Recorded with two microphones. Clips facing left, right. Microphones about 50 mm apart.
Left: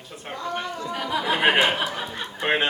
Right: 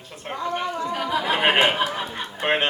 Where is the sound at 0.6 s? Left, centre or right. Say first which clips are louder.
Right 4 dB; centre.